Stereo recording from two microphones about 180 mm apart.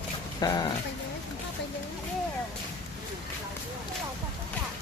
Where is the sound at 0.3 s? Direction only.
25° left (ahead or behind).